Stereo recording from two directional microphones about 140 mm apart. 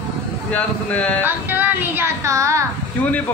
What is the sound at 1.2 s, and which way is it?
A woman's voice, 15° right (ahead or behind).